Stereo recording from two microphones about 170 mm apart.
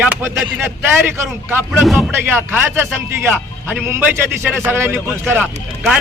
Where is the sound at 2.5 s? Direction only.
15° right (ahead or behind).